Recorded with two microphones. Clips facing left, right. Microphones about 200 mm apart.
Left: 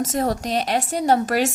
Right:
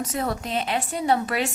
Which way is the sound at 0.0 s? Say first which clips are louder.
Left 5 dB; 45° left (ahead or behind).